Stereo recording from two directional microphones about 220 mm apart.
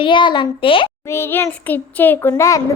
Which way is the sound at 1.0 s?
10° left (ahead or behind).